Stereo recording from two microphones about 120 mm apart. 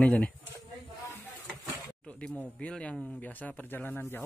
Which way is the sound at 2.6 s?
10° left (ahead or behind).